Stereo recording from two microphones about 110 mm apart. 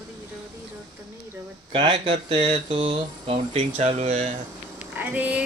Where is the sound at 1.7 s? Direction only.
55° right (ahead or behind); by 4.3 s 90° right.